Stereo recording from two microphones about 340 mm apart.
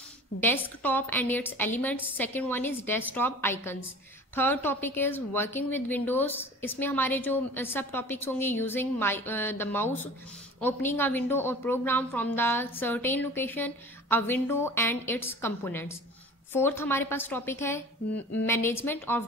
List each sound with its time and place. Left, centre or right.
0.6 s a woman's voice: centre